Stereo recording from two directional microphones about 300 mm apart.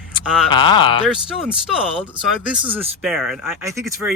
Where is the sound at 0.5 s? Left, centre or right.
Centre.